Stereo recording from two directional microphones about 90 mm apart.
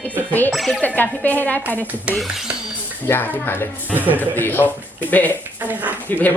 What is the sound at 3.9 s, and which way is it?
Speech, 20° right (ahead or behind).